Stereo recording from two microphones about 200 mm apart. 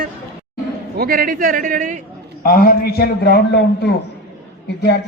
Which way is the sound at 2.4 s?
50° left (ahead or behind).